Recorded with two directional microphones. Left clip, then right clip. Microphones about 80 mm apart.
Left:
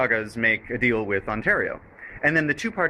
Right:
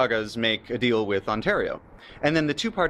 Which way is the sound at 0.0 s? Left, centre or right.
Right.